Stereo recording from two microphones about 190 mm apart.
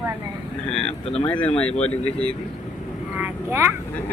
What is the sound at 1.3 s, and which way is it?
Speech, 5° left (ahead or behind).